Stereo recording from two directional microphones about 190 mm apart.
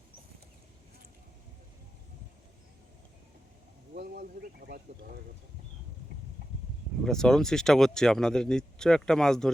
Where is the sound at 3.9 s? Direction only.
55° right (ahead or behind).